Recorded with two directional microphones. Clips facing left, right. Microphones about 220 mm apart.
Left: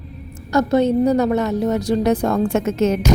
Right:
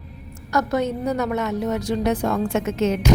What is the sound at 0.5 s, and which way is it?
A woman's voice, 30° left (ahead or behind).